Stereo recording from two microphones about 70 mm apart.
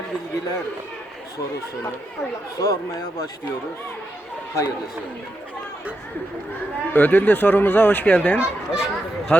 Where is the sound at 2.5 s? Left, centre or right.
Left.